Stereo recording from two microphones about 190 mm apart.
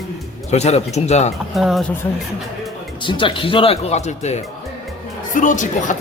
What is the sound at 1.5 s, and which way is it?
Speech, centre (ahead or behind).